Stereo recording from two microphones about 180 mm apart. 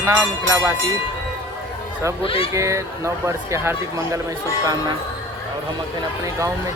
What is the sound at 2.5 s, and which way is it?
Speech, 15° right (ahead or behind).